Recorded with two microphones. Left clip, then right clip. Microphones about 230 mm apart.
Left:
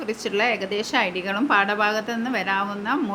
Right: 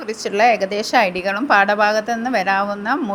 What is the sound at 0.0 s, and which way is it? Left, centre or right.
A woman's voice, centre.